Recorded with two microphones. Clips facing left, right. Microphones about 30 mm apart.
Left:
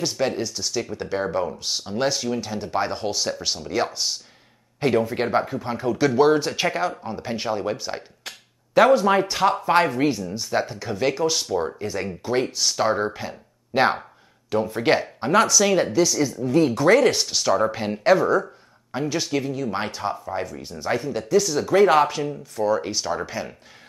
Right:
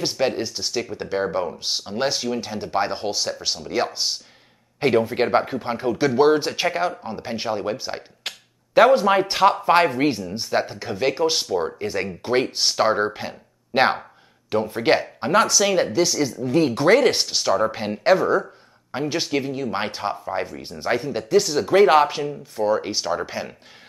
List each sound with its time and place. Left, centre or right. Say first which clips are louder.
0.0 s speech: right 1 dB; right
1.0 s speech: right 1 dB; centre
3.3 s speech: even; centre
3.6 s speech: right 1 dB; centre
9.0 s speech: right 1 dB; centre
9.3 s speech: right 3 dB; right
16.4 s speech: even; right
17.3 s speech: even; centre
18.9 s speech: right 1 dB; right